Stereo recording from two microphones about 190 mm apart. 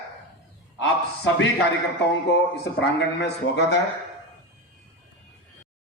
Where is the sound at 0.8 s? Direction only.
75° left (ahead or behind).